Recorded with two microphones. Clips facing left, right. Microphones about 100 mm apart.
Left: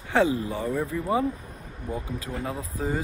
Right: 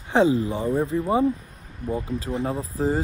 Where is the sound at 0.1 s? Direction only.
20° right (ahead or behind).